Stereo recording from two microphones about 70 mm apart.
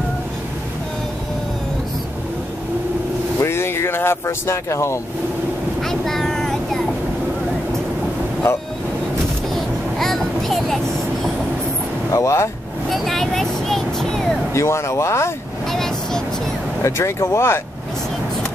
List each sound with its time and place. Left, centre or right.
3.4 s vehicle: left
5.8 s vehicle: centre
8.5 s speech: left
9.5 s a sound: centre
12.1 s speech: left
12.9 s vehicle: centre
14.5 s speech: left
15.7 s vehicle: centre
16.8 s speech: left